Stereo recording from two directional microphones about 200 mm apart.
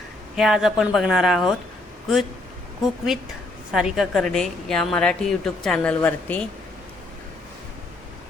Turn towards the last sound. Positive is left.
turn(degrees=5)  # may be behind; listen again after turning